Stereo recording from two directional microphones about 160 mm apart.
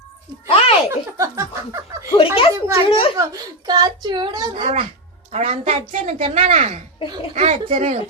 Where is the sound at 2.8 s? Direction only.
35° left (ahead or behind).